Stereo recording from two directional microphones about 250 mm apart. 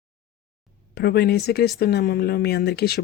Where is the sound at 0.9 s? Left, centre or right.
Left.